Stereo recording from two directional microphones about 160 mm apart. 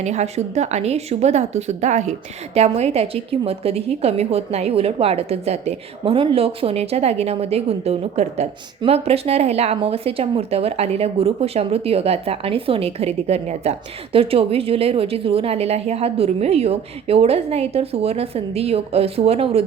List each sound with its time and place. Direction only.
0.0 s a woman's voice: 45° right (ahead or behind)